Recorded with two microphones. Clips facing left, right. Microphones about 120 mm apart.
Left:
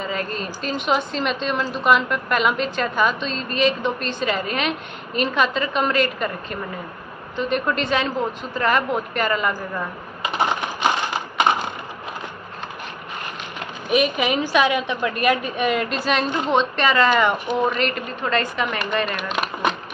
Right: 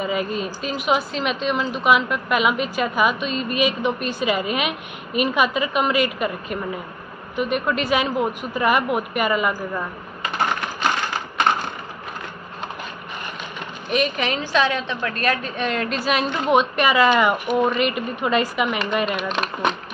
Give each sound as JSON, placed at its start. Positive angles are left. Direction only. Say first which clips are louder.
{"t": 0.0, "sound": "a woman's voice", "louder": "right 3 dB", "side_deg": -10}
{"t": 10.2, "sound": "typing", "louder": "left 1 dB", "side_deg": 15}
{"t": 13.8, "sound": "a woman's voice", "louder": "left 2 dB", "side_deg": 5}
{"t": 19.1, "sound": "speech", "louder": "right 1 dB", "side_deg": 0}